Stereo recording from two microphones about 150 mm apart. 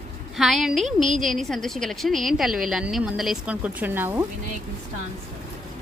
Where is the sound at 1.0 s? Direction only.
60° right (ahead or behind).